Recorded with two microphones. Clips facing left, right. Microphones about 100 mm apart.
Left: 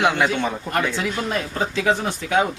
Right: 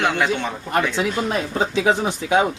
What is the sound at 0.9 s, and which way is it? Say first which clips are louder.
Speech: right 2 dB; 20° right (ahead or behind).